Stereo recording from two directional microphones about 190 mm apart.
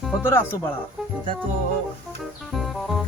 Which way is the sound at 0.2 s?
15° left (ahead or behind).